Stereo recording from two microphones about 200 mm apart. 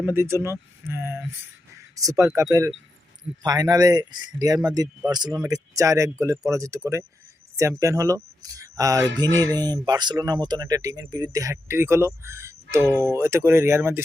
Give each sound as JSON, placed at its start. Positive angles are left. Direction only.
{"t": 0.0, "sound": "speech", "side_deg": -10}